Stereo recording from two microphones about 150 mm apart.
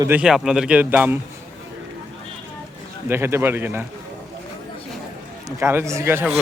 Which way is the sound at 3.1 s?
15° right (ahead or behind).